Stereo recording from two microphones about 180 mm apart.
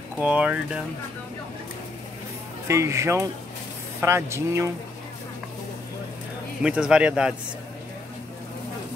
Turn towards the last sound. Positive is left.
turn(degrees=-5)  # may be behind; listen again after turning